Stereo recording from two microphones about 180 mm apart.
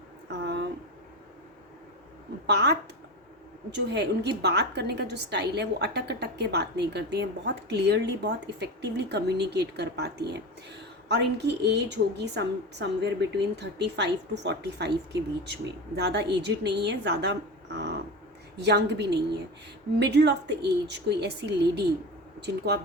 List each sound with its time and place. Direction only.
0.3 s a sound: 70° right (ahead or behind)
2.5 s a woman's voice: 70° right (ahead or behind)
18.6 s a woman's voice: 70° right (ahead or behind)